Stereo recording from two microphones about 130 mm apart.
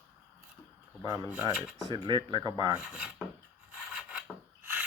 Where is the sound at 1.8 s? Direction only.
35° right (ahead or behind).